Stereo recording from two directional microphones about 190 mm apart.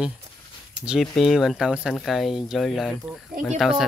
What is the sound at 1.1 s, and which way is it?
Speech, centre (ahead or behind).